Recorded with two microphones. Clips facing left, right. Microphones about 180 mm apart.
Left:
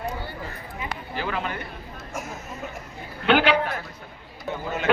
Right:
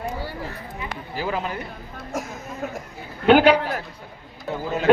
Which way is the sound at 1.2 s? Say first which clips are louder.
Right 3 dB; 10° right (ahead or behind).